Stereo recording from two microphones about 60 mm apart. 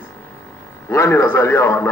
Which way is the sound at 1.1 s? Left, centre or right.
Left.